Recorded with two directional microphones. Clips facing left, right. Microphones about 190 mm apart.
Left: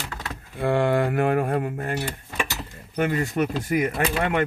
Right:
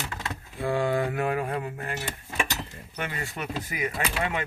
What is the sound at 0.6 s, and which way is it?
Speech, 60° left (ahead or behind).